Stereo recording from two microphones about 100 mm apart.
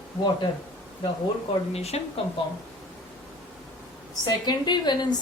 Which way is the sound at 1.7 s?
90° left.